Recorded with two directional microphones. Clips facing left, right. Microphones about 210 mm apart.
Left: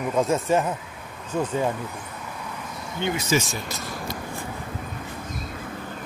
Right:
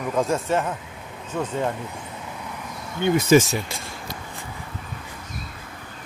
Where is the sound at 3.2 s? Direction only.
60° right (ahead or behind).